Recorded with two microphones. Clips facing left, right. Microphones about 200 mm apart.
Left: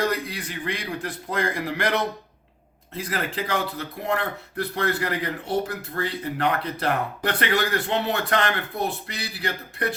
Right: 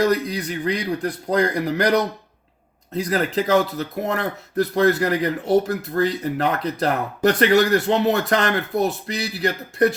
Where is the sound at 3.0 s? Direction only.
40° right (ahead or behind).